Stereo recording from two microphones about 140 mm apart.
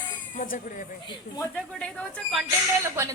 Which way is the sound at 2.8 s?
20° right (ahead or behind).